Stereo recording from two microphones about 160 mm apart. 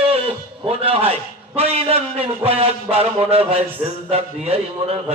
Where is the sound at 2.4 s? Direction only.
35° right (ahead or behind).